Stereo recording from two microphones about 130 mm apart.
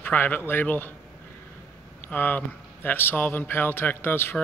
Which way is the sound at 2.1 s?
15° left (ahead or behind).